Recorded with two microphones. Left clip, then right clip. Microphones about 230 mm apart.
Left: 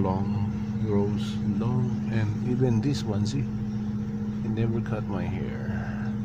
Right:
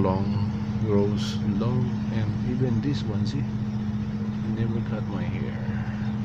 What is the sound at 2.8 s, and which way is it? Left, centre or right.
Speech, left.